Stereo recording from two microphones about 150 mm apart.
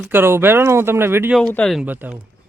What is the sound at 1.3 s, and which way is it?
Speech, 5° left (ahead or behind).